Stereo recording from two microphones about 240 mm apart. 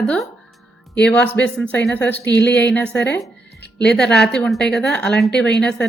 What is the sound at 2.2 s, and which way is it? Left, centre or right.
Speech, left.